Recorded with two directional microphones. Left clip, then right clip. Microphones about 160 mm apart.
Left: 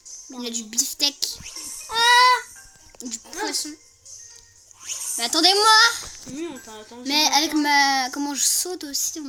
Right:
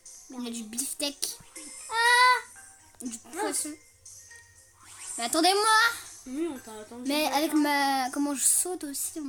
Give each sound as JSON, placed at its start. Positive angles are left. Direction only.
{"t": 0.4, "sound": "speech", "side_deg": -10}
{"t": 1.9, "sound": "a sound", "side_deg": 40}
{"t": 3.0, "sound": "speech", "side_deg": -10}
{"t": 5.1, "sound": "speech", "side_deg": -10}